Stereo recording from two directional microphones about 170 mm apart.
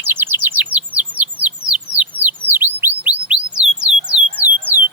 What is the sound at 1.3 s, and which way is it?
Bird, 25° left (ahead or behind).